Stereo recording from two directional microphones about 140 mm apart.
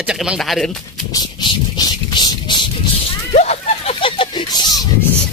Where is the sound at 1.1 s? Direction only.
30° left (ahead or behind).